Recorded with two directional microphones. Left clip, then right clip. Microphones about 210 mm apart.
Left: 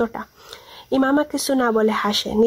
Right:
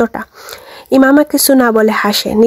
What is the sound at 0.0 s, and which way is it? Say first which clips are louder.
Speech: right 8 dB; 45° right (ahead or behind).